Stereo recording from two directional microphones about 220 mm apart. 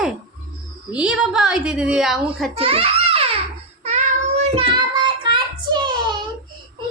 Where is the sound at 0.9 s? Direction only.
5° right (ahead or behind).